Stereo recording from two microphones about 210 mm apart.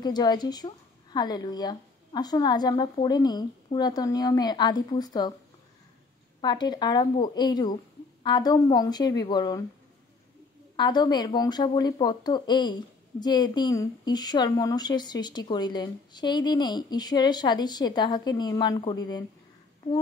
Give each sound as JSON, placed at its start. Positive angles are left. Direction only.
{"t": 0.0, "sound": "speech", "side_deg": 20}
{"t": 6.4, "sound": "speech", "side_deg": 20}
{"t": 10.8, "sound": "speech", "side_deg": 20}